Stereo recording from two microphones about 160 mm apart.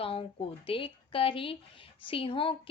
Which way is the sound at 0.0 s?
35° left (ahead or behind).